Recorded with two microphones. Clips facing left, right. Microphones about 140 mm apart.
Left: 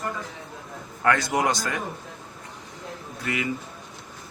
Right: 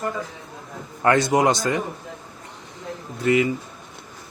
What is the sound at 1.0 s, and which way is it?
Speech, 25° right (ahead or behind).